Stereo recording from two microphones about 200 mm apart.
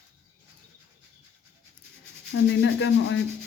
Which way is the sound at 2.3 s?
70° left (ahead or behind).